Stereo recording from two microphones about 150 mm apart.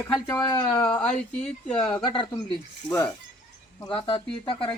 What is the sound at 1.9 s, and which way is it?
Speech, 35° left (ahead or behind).